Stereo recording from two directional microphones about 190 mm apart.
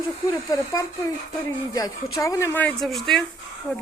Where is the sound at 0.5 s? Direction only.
15° left (ahead or behind).